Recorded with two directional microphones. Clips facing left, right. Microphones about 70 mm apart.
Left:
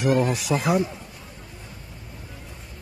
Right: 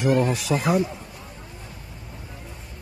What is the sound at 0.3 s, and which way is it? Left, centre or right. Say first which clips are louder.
Speech: even; centre.